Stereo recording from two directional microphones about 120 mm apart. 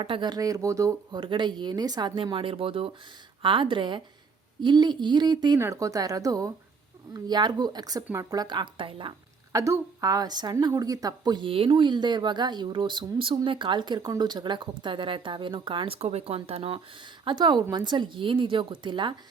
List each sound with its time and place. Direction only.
0.0 s speech: 40° right (ahead or behind)
1.1 s a woman's voice: 40° right (ahead or behind)
5.5 s speech: 25° right (ahead or behind); by 9.1 s 45° right (ahead or behind)
9.5 s speech: 25° right (ahead or behind); by 16.0 s 45° right (ahead or behind)
16.0 s speech: 60° right (ahead or behind)
17.2 s speech: 40° right (ahead or behind)